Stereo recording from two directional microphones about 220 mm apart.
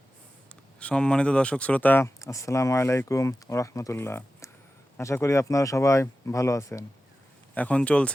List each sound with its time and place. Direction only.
0.8 s speech: 5° left (ahead or behind)